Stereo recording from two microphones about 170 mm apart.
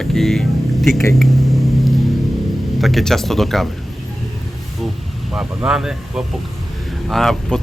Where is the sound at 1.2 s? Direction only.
Centre (ahead or behind).